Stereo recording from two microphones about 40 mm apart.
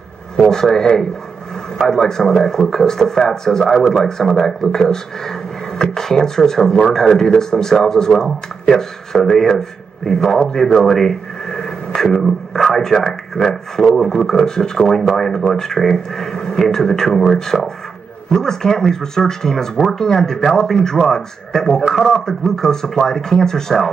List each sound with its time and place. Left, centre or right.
0.5 s speech: centre
11.5 s radio: centre
12.1 s a sound: centre
13.9 s a man's voice: centre